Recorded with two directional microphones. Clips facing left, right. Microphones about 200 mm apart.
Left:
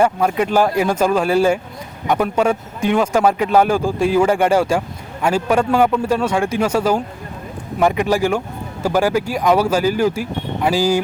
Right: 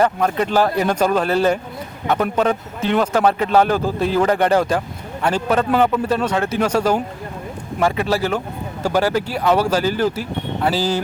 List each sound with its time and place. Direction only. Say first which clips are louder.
0.0 s speech: left 1 dB; 10° left (ahead or behind)